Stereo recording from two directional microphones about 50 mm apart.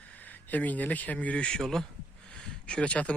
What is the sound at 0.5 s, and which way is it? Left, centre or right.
Speech, left.